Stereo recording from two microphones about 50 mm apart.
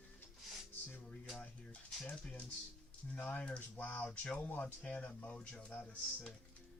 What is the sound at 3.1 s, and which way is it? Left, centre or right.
Speech, left.